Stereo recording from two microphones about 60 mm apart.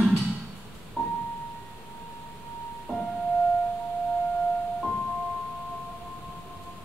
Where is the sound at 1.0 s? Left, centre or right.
Centre.